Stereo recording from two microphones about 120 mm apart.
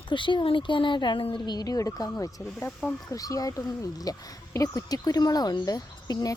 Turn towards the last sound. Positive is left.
turn(degrees=30)  # may be behind; listen again after turning